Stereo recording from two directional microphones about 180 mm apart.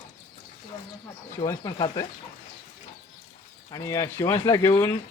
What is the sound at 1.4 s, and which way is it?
Speech, 20° left (ahead or behind).